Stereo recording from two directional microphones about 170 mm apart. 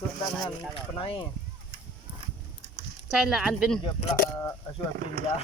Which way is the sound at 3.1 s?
Centre (ahead or behind).